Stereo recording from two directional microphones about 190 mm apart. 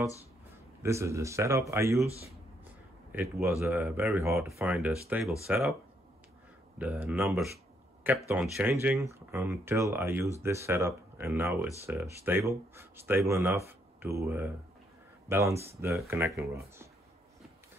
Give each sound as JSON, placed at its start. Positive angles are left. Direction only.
{"t": 0.8, "sound": "speech", "side_deg": -15}
{"t": 3.1, "sound": "speech", "side_deg": -10}
{"t": 6.8, "sound": "speech", "side_deg": -5}